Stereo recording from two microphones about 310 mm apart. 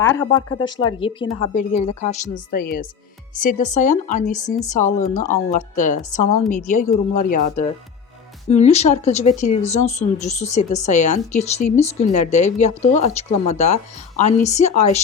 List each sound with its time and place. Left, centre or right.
0.0 s a woman's voice: centre